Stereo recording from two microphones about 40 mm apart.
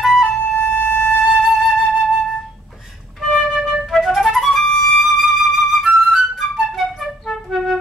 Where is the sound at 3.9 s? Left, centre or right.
Centre.